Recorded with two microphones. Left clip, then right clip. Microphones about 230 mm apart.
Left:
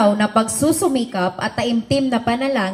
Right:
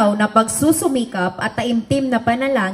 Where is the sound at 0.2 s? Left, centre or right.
Right.